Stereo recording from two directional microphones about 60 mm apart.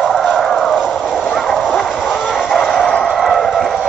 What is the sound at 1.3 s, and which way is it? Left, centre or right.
Vehicle, centre.